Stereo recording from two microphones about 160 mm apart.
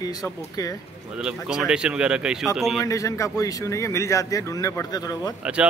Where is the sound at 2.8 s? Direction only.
20° left (ahead or behind).